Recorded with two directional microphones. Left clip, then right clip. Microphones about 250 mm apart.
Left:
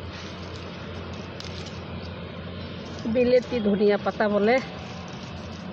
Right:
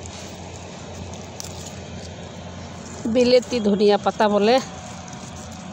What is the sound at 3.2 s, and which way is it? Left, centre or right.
Speech, centre.